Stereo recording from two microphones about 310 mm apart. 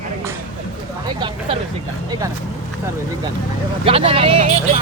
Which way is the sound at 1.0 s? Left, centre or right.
Centre.